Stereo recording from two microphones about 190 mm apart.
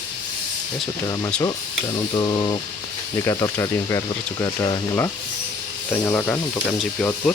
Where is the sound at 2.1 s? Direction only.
20° left (ahead or behind).